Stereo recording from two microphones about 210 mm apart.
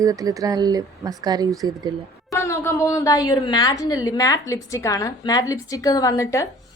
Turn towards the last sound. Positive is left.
turn(degrees=15)  # may be behind; listen again after turning